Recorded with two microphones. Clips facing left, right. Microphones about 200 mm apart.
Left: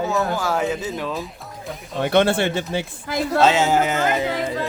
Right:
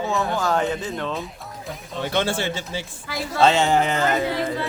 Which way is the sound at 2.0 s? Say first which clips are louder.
Left 6 dB; 60° left (ahead or behind).